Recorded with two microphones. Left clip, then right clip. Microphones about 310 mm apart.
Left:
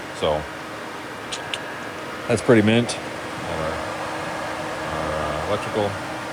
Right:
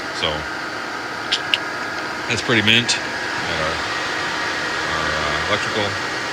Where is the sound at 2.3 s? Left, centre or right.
Centre.